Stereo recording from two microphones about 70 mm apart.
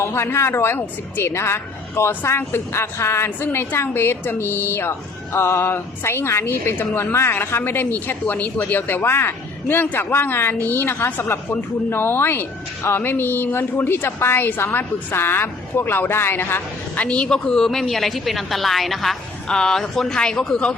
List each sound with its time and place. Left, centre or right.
0.0 s speech: left; by 20.7 s centre